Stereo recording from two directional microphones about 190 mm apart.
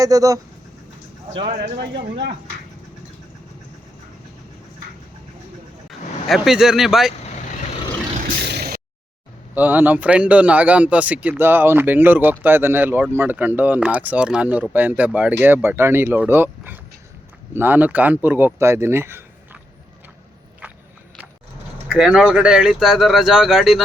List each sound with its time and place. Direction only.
0.0 s speech: 20° right (ahead or behind)
1.6 s speech: 60° right (ahead or behind)
5.9 s speech: centre (ahead or behind)
8.2 s vehicle: 50° right (ahead or behind)
9.6 s a man's voice: 10° right (ahead or behind)
21.8 s speech: 5° right (ahead or behind)